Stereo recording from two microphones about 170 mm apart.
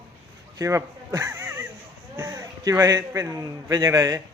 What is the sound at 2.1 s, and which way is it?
A man's voice, 20° right (ahead or behind).